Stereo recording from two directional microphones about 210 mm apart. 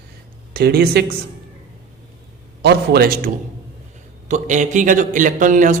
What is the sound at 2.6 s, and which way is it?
Speech, 50° right (ahead or behind).